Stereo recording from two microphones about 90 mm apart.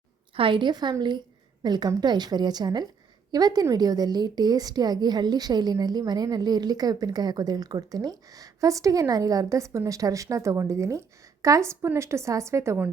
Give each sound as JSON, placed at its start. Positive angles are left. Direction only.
{"t": 0.3, "sound": "a woman's voice", "side_deg": -75}